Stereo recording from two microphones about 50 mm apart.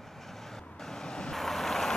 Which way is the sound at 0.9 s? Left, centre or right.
Centre.